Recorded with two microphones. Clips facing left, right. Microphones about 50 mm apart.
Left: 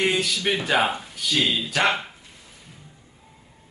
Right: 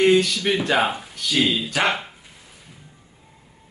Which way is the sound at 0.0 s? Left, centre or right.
Centre.